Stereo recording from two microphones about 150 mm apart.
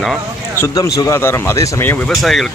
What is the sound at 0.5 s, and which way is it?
Speech, 20° left (ahead or behind).